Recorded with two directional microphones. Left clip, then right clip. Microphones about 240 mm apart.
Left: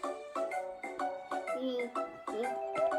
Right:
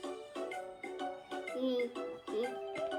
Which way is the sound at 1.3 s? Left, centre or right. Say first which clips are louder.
Left 4 dB; centre.